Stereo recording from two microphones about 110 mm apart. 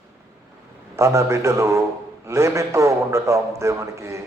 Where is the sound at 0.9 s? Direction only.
25° right (ahead or behind).